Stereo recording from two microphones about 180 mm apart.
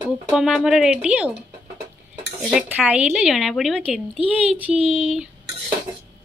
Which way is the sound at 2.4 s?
10° right (ahead or behind).